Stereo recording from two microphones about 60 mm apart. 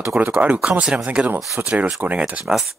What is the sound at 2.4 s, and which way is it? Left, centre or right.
Speech, centre.